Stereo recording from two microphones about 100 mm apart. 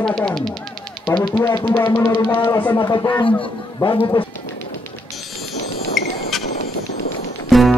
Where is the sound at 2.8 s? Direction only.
45° left (ahead or behind).